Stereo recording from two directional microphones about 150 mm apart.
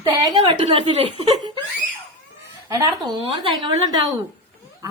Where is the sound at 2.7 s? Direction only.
25° right (ahead or behind).